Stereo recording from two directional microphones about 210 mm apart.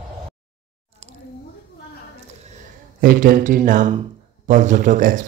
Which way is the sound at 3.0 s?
40° right (ahead or behind).